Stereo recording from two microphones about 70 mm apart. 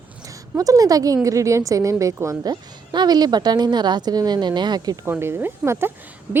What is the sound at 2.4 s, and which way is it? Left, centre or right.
A woman's voice, right.